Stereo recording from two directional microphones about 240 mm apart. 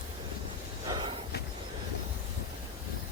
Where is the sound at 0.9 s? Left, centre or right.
Centre.